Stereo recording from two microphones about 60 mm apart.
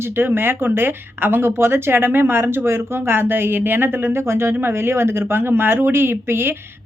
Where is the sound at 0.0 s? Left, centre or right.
Right.